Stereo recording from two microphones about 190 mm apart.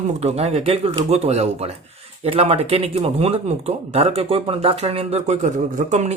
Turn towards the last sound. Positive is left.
turn(degrees=-35)  # may be behind; listen again after turning